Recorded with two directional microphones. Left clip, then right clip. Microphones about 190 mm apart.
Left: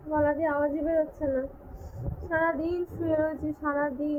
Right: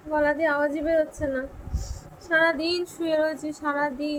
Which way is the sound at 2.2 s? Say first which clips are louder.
Right 5 dB; 25° right (ahead or behind).